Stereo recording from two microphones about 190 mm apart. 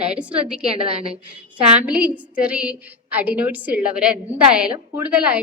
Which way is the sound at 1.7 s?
5° right (ahead or behind).